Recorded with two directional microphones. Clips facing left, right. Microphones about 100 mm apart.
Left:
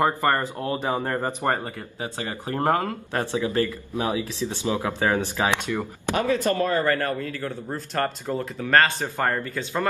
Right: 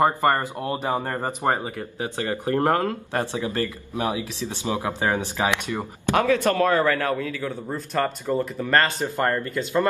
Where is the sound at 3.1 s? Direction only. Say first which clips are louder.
Left 1 dB; 15° right (ahead or behind).